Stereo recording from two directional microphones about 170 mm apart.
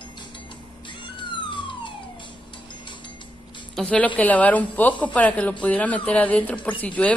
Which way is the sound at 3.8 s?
5° left (ahead or behind).